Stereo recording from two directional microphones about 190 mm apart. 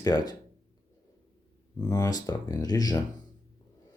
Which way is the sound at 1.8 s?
20° left (ahead or behind).